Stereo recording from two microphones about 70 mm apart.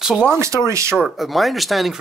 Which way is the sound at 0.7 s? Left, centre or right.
Right.